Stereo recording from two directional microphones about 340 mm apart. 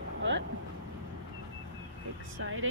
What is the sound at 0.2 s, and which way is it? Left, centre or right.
Vehicle, right.